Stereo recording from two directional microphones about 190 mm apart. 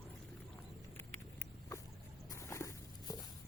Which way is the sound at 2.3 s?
15° left (ahead or behind).